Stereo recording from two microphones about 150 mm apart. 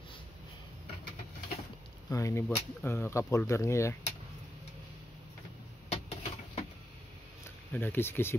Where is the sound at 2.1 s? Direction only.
20° left (ahead or behind).